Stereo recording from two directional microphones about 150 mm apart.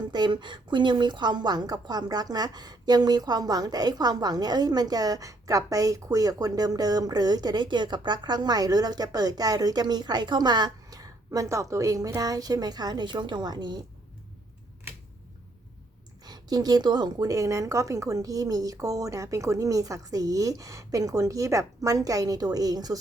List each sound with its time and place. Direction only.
0.1 s a woman's voice: 30° right (ahead or behind)
16.2 s a woman's voice: 25° right (ahead or behind)